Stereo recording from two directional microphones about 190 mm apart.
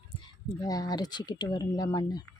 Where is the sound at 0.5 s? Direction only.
20° left (ahead or behind).